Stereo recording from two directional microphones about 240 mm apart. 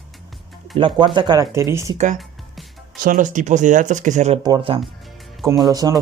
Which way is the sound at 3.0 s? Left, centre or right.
Right.